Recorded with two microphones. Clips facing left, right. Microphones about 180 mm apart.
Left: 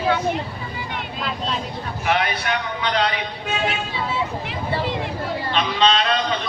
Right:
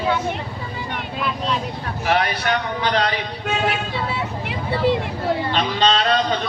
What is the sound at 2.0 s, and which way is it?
A man's voice, 35° right (ahead or behind).